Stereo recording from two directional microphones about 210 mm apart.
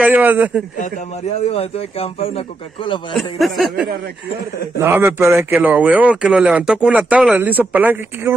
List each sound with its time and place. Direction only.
0.0 s a man's voice: 10° right (ahead or behind)
0.7 s a man's voice: 35° left (ahead or behind)
3.2 s speech: centre (ahead or behind)
4.7 s a man's voice: 10° right (ahead or behind)